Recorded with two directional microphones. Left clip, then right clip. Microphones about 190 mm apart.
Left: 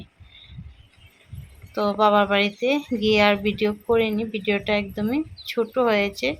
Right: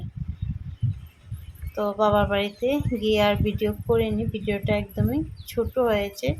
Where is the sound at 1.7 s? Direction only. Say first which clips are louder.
Left 3 dB; 15° left (ahead or behind).